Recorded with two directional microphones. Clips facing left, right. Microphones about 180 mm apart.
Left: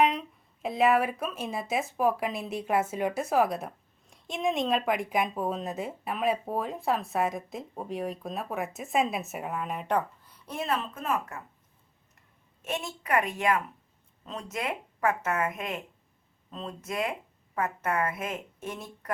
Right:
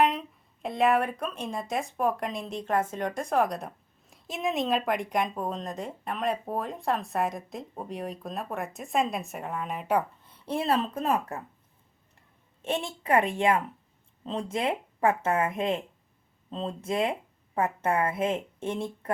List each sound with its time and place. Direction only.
0.0 s speech: centre (ahead or behind)
10.2 s speech: 30° right (ahead or behind)
12.6 s speech: 30° right (ahead or behind)